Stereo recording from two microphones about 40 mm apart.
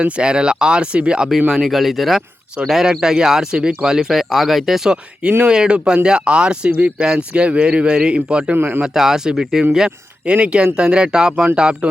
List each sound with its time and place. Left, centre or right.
0.0 s a man's voice: right
1.5 s speech: centre; by 3.9 s right
3.9 s speech: centre
5.5 s a man's voice: right
6.7 s speech: right
7.0 s a man's voice: right
8.5 s speech: right
8.9 s speech: centre
10.2 s a man's voice: right